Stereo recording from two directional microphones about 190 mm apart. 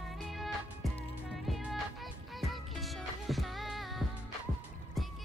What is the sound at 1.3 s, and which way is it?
Music, centre (ahead or behind).